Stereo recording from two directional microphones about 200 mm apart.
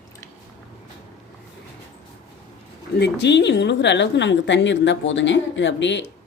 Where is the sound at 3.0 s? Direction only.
60° left (ahead or behind).